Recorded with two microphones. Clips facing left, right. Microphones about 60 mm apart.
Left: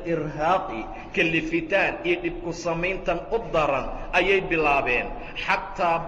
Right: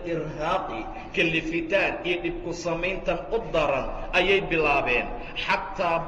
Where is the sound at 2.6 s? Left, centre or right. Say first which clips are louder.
Left 2 dB; left.